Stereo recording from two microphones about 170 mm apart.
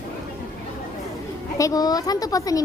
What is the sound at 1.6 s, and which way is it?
A woman's voice, 20° left (ahead or behind).